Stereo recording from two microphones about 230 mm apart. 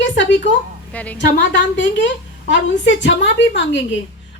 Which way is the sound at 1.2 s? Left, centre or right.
Left.